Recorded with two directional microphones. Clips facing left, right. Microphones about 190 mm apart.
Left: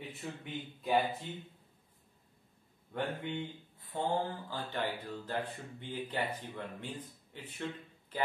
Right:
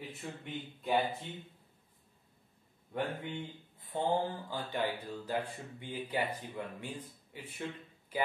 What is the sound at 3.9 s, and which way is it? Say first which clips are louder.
Speech: right 2 dB; 20° right (ahead or behind).